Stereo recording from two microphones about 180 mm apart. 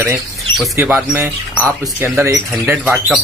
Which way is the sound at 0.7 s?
10° right (ahead or behind).